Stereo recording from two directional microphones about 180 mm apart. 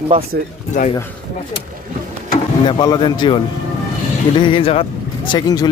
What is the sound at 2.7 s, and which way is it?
Speech, 25° left (ahead or behind).